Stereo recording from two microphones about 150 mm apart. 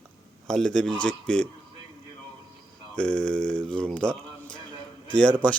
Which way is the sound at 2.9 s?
5° left (ahead or behind).